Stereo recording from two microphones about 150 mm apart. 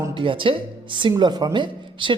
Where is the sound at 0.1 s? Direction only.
35° right (ahead or behind).